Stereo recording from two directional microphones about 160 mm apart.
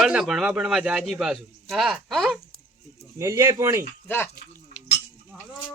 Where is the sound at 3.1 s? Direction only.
20° right (ahead or behind).